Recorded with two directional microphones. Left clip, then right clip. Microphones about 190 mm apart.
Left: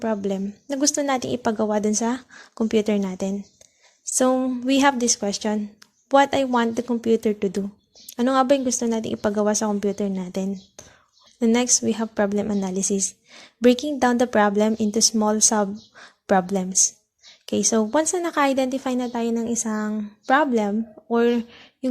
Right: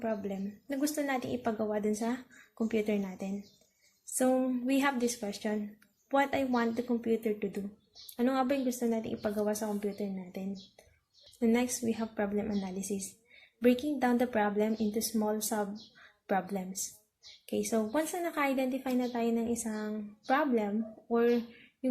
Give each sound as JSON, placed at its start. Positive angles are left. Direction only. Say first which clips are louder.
{"t": 0.0, "sound": "a woman's voice", "louder": "left 10 dB", "side_deg": 50}